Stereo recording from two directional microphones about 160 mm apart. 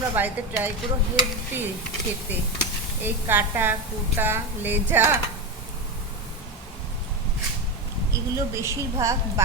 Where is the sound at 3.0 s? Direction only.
15° right (ahead or behind).